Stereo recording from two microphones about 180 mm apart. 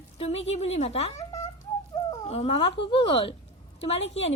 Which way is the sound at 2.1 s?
35° left (ahead or behind).